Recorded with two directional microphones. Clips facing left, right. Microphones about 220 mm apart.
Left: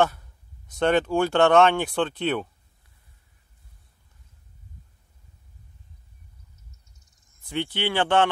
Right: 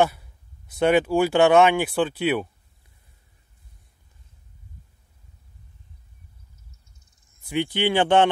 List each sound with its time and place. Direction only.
0.0 s speech: 10° right (ahead or behind)
7.4 s speech: 15° right (ahead or behind)